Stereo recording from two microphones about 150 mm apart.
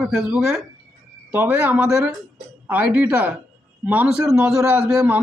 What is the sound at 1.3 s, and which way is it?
Speech, 15° right (ahead or behind).